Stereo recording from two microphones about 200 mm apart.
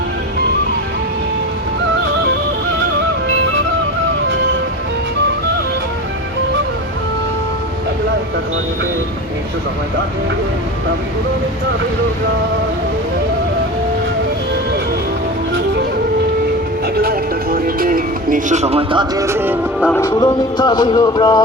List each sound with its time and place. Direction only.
17.0 s music: 50° right (ahead or behind); by 19.5 s 10° right (ahead or behind)
19.8 s music: 10° left (ahead or behind)
20.1 s music: 20° left (ahead or behind)